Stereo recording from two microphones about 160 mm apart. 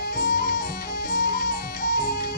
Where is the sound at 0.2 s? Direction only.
65° left (ahead or behind).